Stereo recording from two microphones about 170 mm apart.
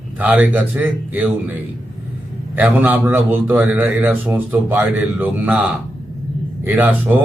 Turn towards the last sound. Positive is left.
turn(degrees=-10)  # may be behind; listen again after turning